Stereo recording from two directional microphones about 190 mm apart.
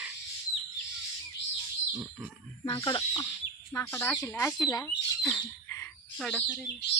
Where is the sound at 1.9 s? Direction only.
10° right (ahead or behind).